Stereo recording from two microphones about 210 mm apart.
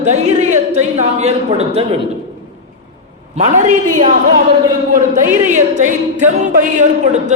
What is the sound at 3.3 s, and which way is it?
Speech, 30° right (ahead or behind).